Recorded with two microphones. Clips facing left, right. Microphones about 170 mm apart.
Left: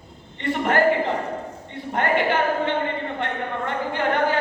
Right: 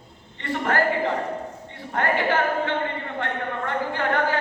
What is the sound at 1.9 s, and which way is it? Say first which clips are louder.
Speech: left 1 dB; 20° left (ahead or behind).